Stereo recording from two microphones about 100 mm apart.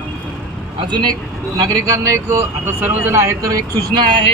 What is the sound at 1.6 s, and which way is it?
Speech, 35° right (ahead or behind).